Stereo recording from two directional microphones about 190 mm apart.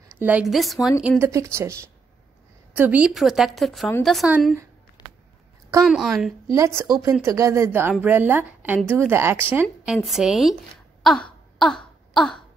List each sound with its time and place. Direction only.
0.2 s a woman's voice: 5° right (ahead or behind)
1.0 s a woman's voice: 15° right (ahead or behind)
5.0 s a sound: 20° left (ahead or behind)
5.9 s a woman's voice: centre (ahead or behind)
6.5 s a woman's voice: 15° right (ahead or behind)
11.0 s throat clearing: 5° left (ahead or behind)
12.1 s a sound: centre (ahead or behind)